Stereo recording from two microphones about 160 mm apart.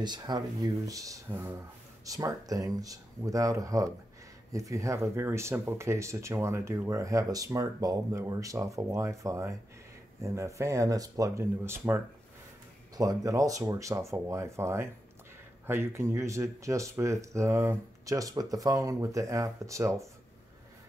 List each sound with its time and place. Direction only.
0.0 s speech: 25° right (ahead or behind)